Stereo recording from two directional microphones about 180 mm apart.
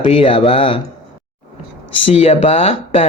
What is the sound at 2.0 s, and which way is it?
Speech, 35° left (ahead or behind).